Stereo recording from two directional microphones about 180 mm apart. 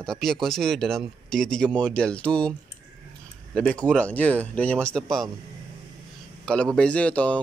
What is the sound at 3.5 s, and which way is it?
Speech, 5° left (ahead or behind).